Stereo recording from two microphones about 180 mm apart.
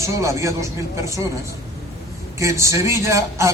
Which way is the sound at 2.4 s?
15° right (ahead or behind).